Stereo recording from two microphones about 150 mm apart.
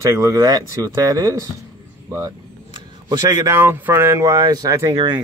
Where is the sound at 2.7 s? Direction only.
25° right (ahead or behind).